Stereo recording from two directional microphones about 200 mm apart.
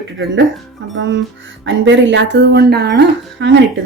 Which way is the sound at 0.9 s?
65° right (ahead or behind).